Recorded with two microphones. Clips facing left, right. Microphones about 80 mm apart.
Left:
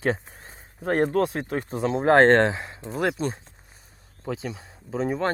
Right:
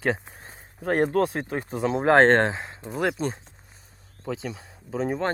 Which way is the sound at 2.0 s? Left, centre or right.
Right.